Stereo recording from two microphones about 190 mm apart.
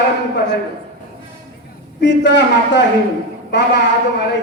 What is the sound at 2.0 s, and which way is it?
A man's voice, 65° left (ahead or behind).